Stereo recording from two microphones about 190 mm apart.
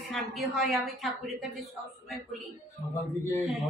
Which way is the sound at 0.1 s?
Centre (ahead or behind).